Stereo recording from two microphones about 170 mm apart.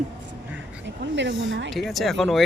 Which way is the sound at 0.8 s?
90° right.